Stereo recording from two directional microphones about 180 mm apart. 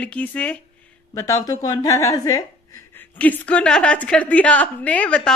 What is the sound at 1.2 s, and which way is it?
A woman's voice, 20° left (ahead or behind).